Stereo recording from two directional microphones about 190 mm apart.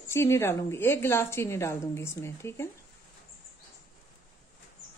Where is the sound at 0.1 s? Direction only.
15° left (ahead or behind).